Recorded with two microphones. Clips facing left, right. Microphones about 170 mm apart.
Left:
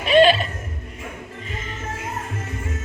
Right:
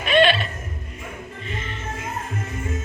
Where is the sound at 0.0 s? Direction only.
35° left (ahead or behind).